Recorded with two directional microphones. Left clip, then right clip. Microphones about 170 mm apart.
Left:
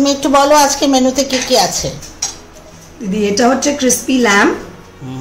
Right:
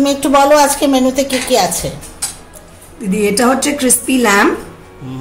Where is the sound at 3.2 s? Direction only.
40° right (ahead or behind).